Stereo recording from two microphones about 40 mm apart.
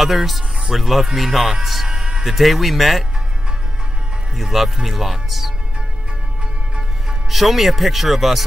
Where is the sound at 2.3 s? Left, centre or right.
Centre.